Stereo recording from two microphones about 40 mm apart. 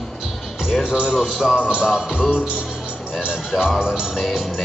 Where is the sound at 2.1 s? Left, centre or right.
Left.